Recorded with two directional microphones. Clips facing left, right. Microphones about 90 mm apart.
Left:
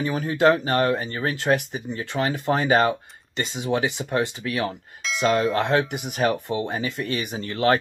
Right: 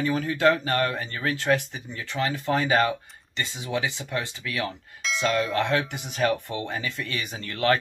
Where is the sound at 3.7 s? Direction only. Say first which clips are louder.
Left 5 dB; 40° left (ahead or behind).